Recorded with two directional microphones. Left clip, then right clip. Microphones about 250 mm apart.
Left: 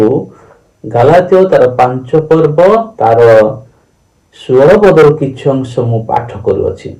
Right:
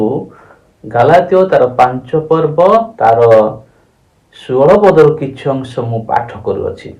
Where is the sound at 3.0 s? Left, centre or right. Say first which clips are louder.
Left 3 dB; right.